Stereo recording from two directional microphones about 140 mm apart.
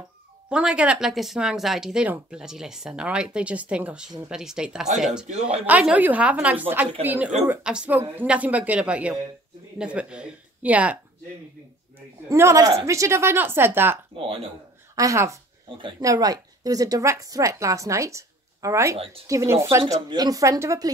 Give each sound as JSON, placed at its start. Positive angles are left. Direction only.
{"t": 0.5, "sound": "speech", "side_deg": -5}
{"t": 5.3, "sound": "a woman's voice", "side_deg": -45}
{"t": 5.7, "sound": "speech", "side_deg": -10}
{"t": 12.3, "sound": "a woman's voice", "side_deg": -20}
{"t": 14.1, "sound": "a woman's voice", "side_deg": -45}
{"t": 15.0, "sound": "a woman's voice", "side_deg": -20}